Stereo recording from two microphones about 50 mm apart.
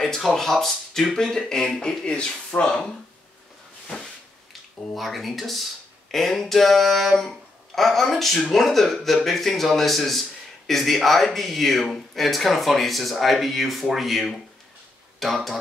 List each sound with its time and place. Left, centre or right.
0.0 s speech: centre
3.9 s a sound: centre
15.1 s speech: centre